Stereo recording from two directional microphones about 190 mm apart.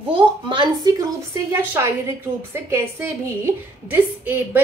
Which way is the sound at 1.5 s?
15° right (ahead or behind).